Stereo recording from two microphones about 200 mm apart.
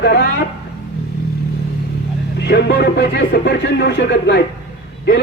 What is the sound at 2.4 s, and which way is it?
A man's voice, 55° left (ahead or behind).